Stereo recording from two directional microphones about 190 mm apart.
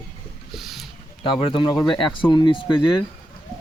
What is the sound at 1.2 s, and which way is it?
Speech, 25° left (ahead or behind).